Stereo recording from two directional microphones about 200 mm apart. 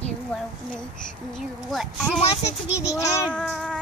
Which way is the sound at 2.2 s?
30° left (ahead or behind).